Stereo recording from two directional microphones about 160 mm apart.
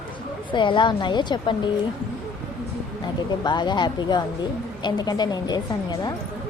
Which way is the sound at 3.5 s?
30° left (ahead or behind).